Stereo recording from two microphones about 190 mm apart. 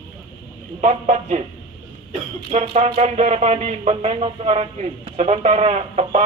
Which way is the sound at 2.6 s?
30° right (ahead or behind).